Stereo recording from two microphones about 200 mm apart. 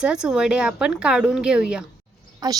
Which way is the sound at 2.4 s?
20° right (ahead or behind).